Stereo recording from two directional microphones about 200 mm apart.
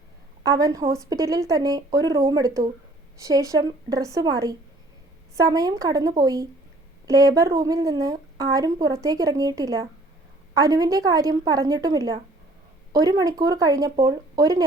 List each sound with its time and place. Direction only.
0.4 s a woman's voice: 15° right (ahead or behind)